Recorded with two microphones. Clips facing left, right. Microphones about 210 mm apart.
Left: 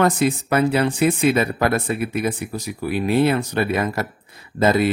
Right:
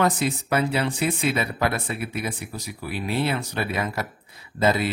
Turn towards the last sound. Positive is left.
turn(degrees=55)  # may be behind; listen again after turning